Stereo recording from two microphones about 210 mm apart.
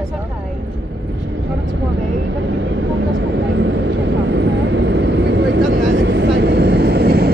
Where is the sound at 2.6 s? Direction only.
60° right (ahead or behind).